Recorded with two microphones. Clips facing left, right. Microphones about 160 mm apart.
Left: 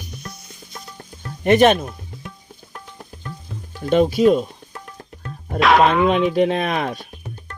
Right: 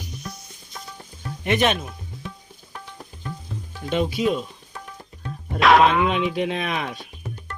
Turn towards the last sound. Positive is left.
turn(degrees=40)  # may be behind; listen again after turning